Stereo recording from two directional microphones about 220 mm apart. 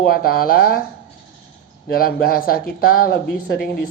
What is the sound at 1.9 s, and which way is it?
Speech, 45° left (ahead or behind).